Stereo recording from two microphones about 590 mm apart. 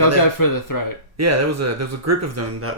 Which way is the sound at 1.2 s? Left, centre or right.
Right.